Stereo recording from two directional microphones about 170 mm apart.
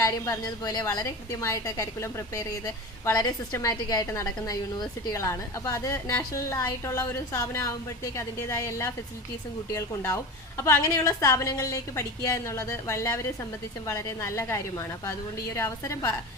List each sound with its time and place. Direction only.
0.0 s a woman's voice: 20° left (ahead or behind)